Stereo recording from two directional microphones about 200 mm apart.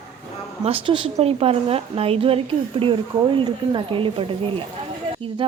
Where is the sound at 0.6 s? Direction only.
25° right (ahead or behind).